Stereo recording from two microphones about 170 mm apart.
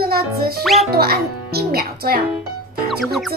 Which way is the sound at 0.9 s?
65° right (ahead or behind).